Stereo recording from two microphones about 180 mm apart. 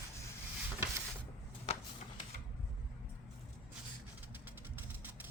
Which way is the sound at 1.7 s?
35° left (ahead or behind).